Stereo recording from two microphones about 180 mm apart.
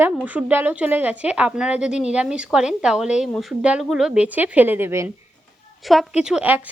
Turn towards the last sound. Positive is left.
turn(degrees=-10)  # may be behind; listen again after turning